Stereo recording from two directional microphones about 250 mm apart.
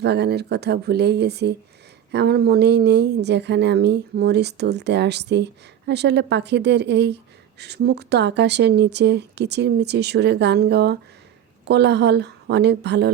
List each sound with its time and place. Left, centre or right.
0.0 s a woman's voice: right